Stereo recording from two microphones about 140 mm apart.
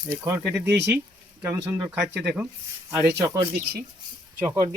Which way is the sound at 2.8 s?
20° right (ahead or behind).